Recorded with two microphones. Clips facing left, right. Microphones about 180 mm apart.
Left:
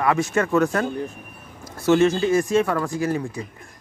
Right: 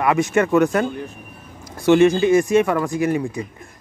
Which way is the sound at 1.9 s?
15° right (ahead or behind).